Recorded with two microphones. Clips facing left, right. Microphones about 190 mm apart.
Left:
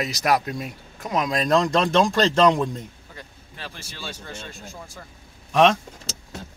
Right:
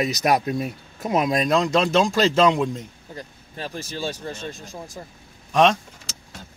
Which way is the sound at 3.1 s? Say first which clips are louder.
Right 9 dB; 40° right (ahead or behind).